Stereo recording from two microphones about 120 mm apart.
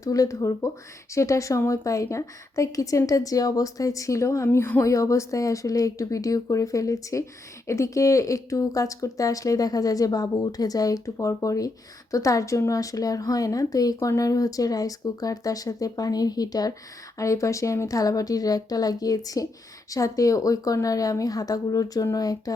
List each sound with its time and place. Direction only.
0.0 s a woman's voice: 30° left (ahead or behind)